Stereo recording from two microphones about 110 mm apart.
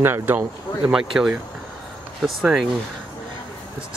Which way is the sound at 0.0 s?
20° right (ahead or behind).